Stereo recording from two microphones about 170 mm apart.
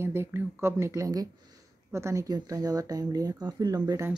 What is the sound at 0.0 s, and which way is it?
Speech, 15° right (ahead or behind).